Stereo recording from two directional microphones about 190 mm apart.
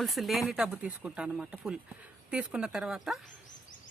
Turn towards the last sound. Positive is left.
turn(degrees=0)  # may be behind; listen again after turning